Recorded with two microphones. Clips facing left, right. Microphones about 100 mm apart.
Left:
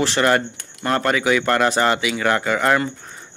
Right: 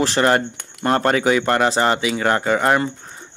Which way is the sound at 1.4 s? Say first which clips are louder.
Even; 20° right (ahead or behind).